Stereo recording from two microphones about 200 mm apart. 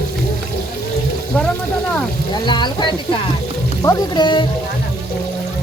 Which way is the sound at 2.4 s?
20° left (ahead or behind).